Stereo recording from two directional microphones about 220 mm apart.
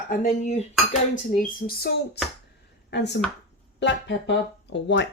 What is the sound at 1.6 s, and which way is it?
Speech, 45° left (ahead or behind).